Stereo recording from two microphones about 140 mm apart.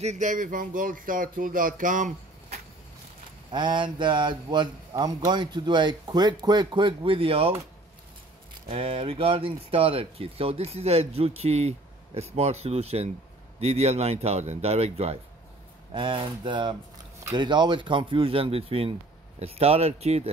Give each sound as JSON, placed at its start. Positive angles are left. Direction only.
{"t": 0.0, "sound": "speech", "side_deg": -60}
{"t": 3.5, "sound": "speech", "side_deg": -35}
{"t": 8.6, "sound": "speech", "side_deg": -40}
{"t": 15.9, "sound": "speech", "side_deg": -35}